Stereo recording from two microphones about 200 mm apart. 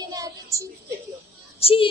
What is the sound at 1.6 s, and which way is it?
Speech, 30° left (ahead or behind).